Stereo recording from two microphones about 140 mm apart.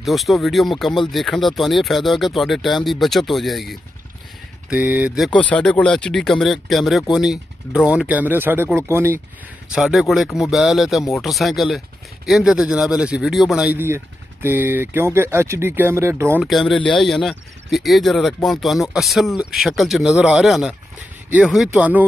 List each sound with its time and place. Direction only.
0.0 s speech: centre (ahead or behind)
4.6 s speech: 15° right (ahead or behind)
5.4 s speech: 10° left (ahead or behind); by 9.2 s 15° right (ahead or behind)
9.7 s speech: 5° right (ahead or behind)
13.7 s speech: 15° right (ahead or behind)
16.3 s speech: centre (ahead or behind)
16.7 s speech: 35° left (ahead or behind)
17.0 s speech: centre (ahead or behind)